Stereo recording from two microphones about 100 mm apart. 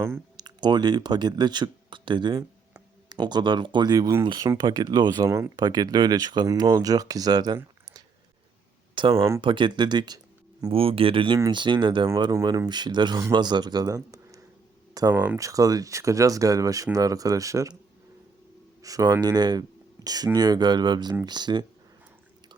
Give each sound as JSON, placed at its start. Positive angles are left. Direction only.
{"t": 0.3, "sound": "speech", "side_deg": -45}
{"t": 9.1, "sound": "speech", "side_deg": -30}
{"t": 9.4, "sound": "speech", "side_deg": -55}
{"t": 10.7, "sound": "speech", "side_deg": -65}
{"t": 15.1, "sound": "speech", "side_deg": -15}
{"t": 15.4, "sound": "speech", "side_deg": -35}
{"t": 18.8, "sound": "speech", "side_deg": -35}